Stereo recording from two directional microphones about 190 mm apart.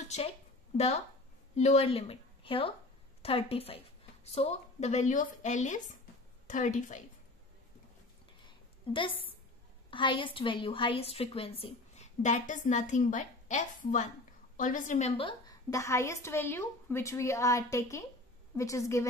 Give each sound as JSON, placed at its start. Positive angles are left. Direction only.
{"t": 0.0, "sound": "a woman's voice", "side_deg": 35}
{"t": 8.5, "sound": "a sound", "side_deg": 25}
{"t": 9.8, "sound": "a woman's voice", "side_deg": 25}